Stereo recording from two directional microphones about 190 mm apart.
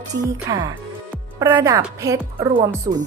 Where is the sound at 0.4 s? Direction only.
20° right (ahead or behind).